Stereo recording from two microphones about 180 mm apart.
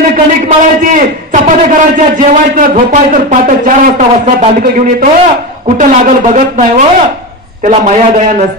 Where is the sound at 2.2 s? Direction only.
45° right (ahead or behind).